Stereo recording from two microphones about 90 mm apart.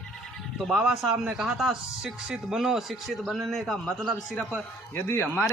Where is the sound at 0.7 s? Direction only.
5° right (ahead or behind).